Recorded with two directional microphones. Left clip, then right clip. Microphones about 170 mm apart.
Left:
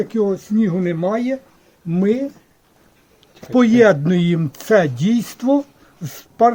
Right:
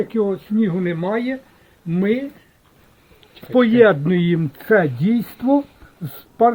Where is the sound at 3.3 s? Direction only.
90° left.